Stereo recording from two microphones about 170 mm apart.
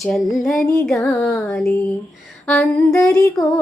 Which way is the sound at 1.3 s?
5° left (ahead or behind).